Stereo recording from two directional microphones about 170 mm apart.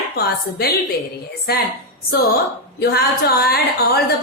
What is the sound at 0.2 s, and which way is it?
Speech, 65° left (ahead or behind).